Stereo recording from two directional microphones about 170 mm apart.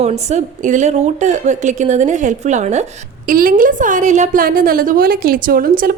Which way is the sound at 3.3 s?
55° right (ahead or behind).